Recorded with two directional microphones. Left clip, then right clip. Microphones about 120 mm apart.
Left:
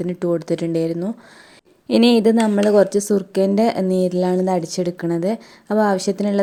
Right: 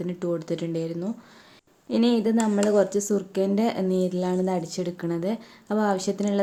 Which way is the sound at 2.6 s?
60° left (ahead or behind).